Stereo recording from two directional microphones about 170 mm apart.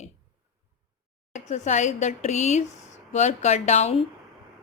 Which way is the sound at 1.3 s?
45° left (ahead or behind).